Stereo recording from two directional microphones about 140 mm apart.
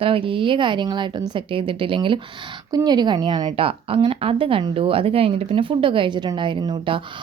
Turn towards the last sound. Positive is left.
turn(degrees=-35)  # may be behind; listen again after turning